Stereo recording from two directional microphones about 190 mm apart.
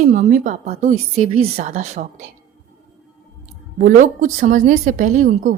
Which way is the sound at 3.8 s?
45° right (ahead or behind).